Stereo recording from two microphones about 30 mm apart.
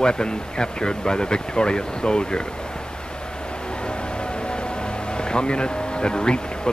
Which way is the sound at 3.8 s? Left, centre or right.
Left.